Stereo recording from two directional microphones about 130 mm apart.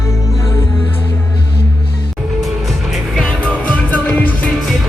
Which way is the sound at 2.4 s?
Centre (ahead or behind).